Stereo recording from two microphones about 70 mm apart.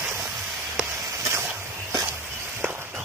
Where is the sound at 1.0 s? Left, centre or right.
Right.